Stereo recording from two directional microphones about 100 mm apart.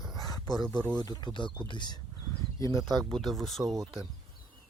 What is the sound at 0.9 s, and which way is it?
Speech, 40° left (ahead or behind).